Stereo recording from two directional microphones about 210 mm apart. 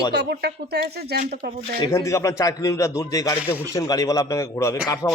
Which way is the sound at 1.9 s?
15° left (ahead or behind).